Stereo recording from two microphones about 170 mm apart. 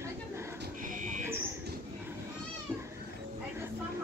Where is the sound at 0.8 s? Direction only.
50° right (ahead or behind).